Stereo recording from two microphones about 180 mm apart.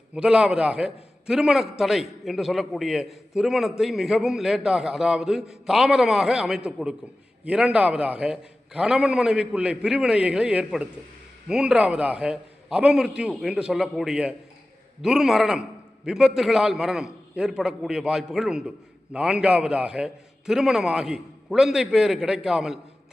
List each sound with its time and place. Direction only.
0.1 s a man's voice: 5° right (ahead or behind)